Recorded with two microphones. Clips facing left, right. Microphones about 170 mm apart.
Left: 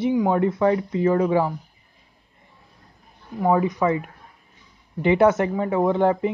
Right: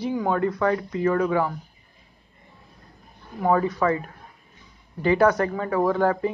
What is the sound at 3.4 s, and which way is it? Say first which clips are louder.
Speech: left 1 dB; 15° left (ahead or behind).